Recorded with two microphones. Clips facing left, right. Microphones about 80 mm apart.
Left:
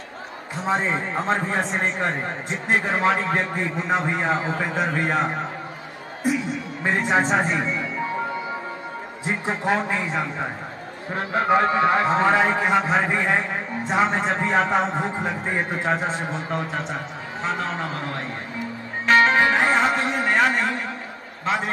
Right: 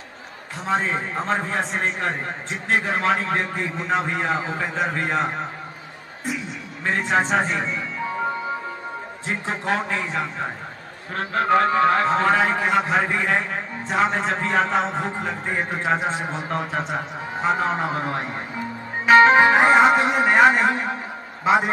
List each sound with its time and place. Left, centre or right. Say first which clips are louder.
0.7 s a man's voice: even; centre
6.8 s a man's voice: even; centre
9.5 s a man's voice: left 1 dB; centre; by 20.9 s right
21.5 s a man's voice: right 6 dB; centre